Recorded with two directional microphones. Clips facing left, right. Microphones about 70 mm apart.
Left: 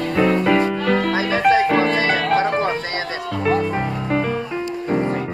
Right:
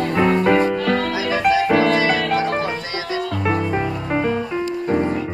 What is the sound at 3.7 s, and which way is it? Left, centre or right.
Music, centre.